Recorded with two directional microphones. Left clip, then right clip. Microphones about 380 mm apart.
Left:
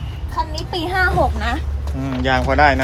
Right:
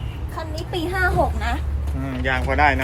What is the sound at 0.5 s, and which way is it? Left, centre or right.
Speech, centre.